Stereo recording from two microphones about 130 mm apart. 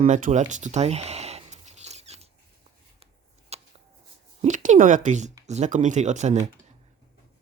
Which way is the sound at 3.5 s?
55° right (ahead or behind).